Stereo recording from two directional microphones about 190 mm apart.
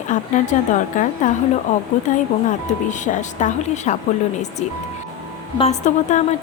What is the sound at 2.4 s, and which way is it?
A woman's voice, 40° left (ahead or behind).